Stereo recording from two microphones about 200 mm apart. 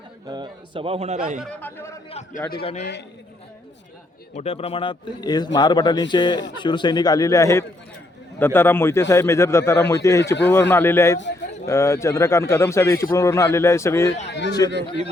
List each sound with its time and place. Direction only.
0.3 s a man's voice: 20° right (ahead or behind)
1.4 s a man's voice: 5° left (ahead or behind)
2.0 s a man's voice: 35° left (ahead or behind)
4.4 s a man's voice: 30° left (ahead or behind); by 14.1 s 15° left (ahead or behind)
14.3 s speech: 60° left (ahead or behind)